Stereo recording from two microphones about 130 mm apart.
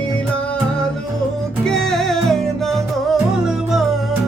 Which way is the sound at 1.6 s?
5° left (ahead or behind).